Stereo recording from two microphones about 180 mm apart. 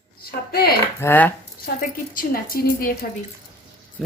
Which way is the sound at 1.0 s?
10° left (ahead or behind).